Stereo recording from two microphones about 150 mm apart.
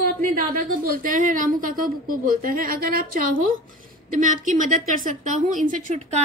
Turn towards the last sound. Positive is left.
turn(degrees=-50)  # may be behind; listen again after turning